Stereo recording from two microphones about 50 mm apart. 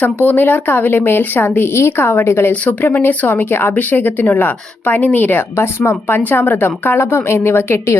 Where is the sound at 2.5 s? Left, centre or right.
Left.